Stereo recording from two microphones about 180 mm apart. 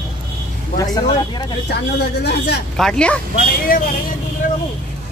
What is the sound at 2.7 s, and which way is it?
Speech, 5° left (ahead or behind).